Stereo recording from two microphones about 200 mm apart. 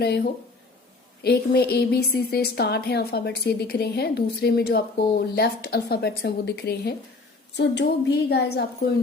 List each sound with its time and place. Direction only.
1.2 s a woman's voice: 55° left (ahead or behind)